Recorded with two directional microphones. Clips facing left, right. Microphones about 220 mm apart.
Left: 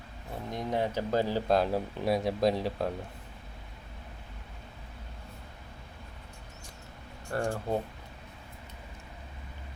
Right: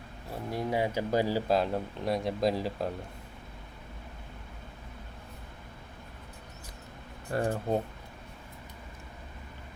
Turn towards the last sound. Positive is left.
turn(degrees=-20)  # may be behind; listen again after turning